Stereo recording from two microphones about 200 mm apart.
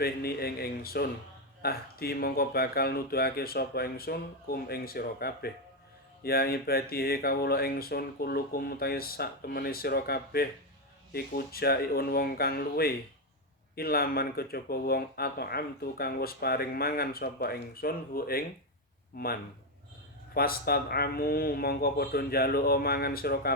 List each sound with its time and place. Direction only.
0.0 s speech: 50° left (ahead or behind)